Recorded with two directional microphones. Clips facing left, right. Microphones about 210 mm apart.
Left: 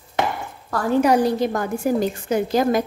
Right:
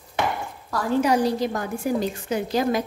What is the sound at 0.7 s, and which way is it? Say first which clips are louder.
A woman's voice: left 3 dB; 55° left (ahead or behind).